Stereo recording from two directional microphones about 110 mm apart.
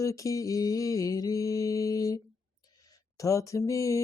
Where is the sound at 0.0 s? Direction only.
30° left (ahead or behind).